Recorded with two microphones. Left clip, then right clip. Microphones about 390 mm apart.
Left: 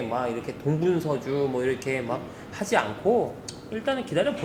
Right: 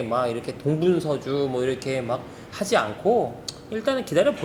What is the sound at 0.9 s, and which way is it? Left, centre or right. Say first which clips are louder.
Speech: right 2 dB; right.